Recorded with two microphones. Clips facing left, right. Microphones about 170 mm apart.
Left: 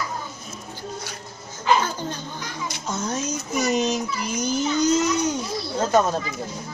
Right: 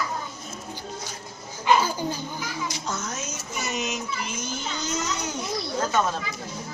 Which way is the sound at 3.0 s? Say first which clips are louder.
Left 7 dB; 35° left (ahead or behind).